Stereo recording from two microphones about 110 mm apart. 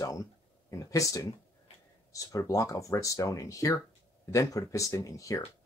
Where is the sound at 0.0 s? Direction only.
30° left (ahead or behind).